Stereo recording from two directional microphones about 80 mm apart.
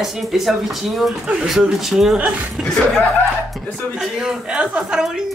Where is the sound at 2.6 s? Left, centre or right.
Centre.